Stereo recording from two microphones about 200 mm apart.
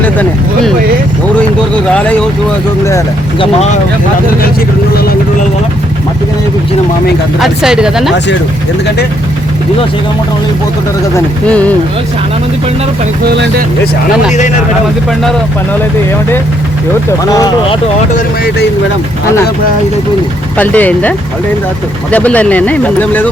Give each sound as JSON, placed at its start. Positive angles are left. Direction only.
{"t": 0.0, "sound": "vehicle", "side_deg": 10}
{"t": 1.9, "sound": "speech", "side_deg": 5}
{"t": 3.4, "sound": "speech", "side_deg": 35}
{"t": 7.3, "sound": "speech", "side_deg": 0}
{"t": 11.1, "sound": "speech", "side_deg": 5}
{"t": 13.2, "sound": "speech", "side_deg": -55}
{"t": 17.2, "sound": "speech", "side_deg": 20}
{"t": 20.6, "sound": "speech", "side_deg": 10}